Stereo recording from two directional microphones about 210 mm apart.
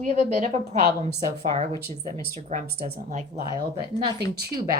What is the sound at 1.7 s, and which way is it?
Speech, 15° left (ahead or behind).